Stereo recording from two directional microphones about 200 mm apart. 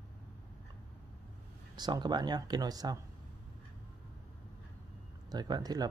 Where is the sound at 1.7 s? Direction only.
20° right (ahead or behind).